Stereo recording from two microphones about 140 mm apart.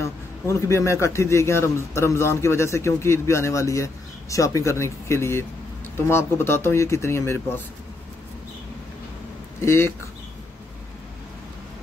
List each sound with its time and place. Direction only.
0.0 s a man's voice: 20° left (ahead or behind)
9.6 s speech: 20° left (ahead or behind)